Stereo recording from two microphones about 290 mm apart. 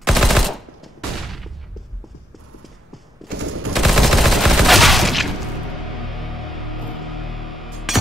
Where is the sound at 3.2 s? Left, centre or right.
Right.